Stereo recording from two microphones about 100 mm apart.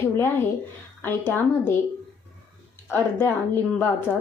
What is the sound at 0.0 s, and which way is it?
A woman's voice, 25° left (ahead or behind).